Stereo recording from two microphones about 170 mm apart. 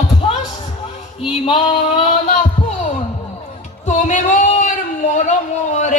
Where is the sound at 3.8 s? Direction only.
45° left (ahead or behind).